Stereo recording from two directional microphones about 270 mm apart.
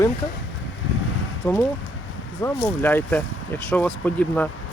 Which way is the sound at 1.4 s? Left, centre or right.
Centre.